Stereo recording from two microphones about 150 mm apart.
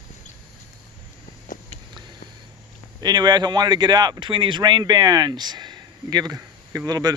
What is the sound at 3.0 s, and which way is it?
Speech, 30° right (ahead or behind).